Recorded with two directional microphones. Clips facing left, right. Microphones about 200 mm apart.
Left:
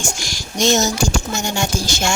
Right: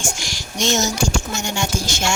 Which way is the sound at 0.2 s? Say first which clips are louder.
Left 4 dB; 40° left (ahead or behind).